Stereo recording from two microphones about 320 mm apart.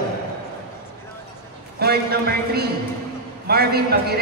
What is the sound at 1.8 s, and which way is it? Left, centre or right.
A man's voice, right.